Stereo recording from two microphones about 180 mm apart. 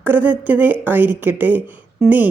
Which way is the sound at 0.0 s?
10° right (ahead or behind).